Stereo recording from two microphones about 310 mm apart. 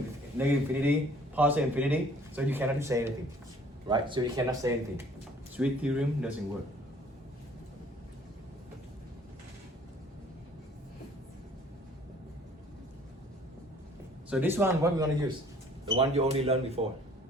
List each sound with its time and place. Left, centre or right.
0.3 s speech: centre
14.3 s speech: centre